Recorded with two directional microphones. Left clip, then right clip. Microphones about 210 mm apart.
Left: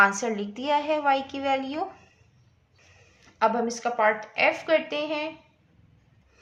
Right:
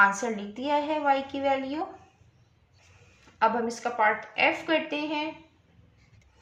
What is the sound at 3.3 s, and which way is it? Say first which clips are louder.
Speech: left 1 dB; 35° left (ahead or behind).